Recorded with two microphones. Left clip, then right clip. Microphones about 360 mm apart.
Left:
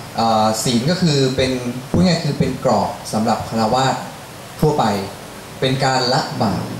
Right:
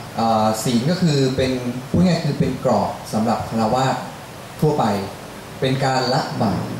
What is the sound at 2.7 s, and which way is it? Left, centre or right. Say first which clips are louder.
Speech: left 1 dB; centre.